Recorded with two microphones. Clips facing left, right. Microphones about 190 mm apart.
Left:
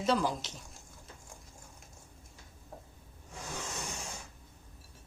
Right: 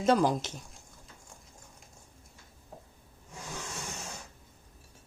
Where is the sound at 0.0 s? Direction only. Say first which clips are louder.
Right 5 dB; 50° right (ahead or behind).